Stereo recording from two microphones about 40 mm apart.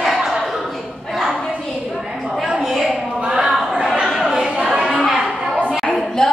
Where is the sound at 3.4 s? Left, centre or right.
Centre.